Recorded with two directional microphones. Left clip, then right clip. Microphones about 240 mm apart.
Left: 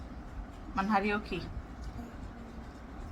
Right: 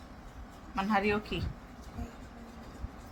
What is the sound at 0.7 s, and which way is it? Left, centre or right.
Speech, centre.